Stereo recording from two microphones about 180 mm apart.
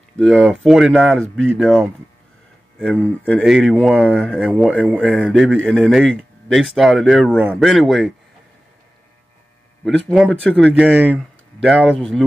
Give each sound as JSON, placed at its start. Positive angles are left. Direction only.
{"t": 0.2, "sound": "a man's voice", "side_deg": 5}
{"t": 10.0, "sound": "a man's voice", "side_deg": 5}
{"t": 10.8, "sound": "speech", "side_deg": -10}
{"t": 11.6, "sound": "a man's voice", "side_deg": 0}